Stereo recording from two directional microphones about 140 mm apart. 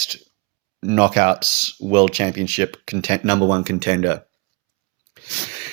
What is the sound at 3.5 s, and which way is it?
Speech, 50° right (ahead or behind).